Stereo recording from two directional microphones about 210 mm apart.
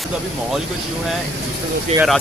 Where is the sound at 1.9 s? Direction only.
25° right (ahead or behind).